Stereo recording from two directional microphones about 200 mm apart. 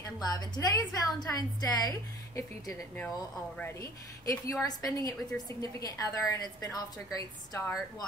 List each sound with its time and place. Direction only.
0.2 s a woman's voice: 20° left (ahead or behind)
4.3 s a woman's voice: 15° left (ahead or behind)